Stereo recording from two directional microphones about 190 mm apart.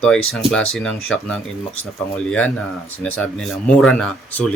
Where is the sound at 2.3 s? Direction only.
5° left (ahead or behind).